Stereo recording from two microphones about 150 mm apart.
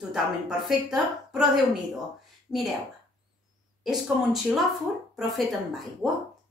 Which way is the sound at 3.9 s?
Centre (ahead or behind).